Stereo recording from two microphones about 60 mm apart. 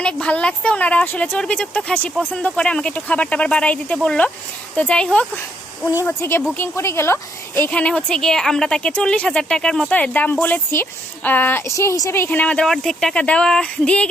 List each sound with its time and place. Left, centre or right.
0.0 s speech: centre
6.1 s a woman's voice: left
7.7 s speech: centre
9.9 s speech: left
11.6 s a woman's voice: left
12.3 s speech: left
12.5 s speech: centre
13.1 s speech: centre